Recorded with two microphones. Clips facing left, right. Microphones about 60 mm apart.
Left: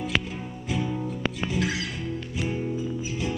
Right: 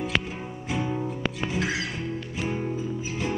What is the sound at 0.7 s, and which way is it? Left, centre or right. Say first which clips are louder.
Music: right 1 dB; right.